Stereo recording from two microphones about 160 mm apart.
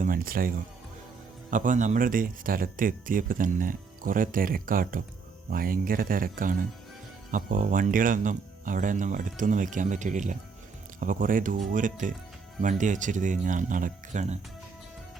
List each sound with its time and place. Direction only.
0.0 s speech: 65° right (ahead or behind)
1.5 s speech: 55° right (ahead or behind)